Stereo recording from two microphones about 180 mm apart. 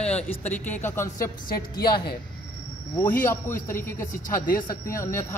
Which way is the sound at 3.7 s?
10° left (ahead or behind).